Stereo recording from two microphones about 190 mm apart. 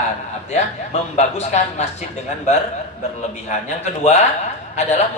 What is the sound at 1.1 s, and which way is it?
A woman's voice, 35° left (ahead or behind).